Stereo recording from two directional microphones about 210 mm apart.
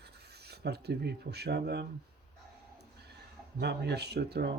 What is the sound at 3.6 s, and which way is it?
Speech, 55° right (ahead or behind).